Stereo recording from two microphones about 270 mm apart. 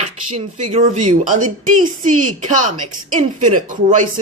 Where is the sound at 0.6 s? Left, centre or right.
Right.